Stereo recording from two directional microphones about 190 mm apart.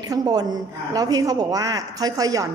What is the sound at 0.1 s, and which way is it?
A woman's voice, 20° right (ahead or behind).